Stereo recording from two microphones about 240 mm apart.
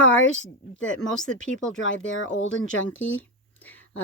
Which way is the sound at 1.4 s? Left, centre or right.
Left.